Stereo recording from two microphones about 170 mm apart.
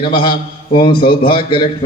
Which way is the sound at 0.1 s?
30° left (ahead or behind).